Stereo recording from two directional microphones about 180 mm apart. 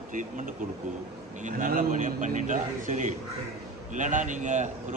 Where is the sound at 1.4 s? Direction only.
45° right (ahead or behind).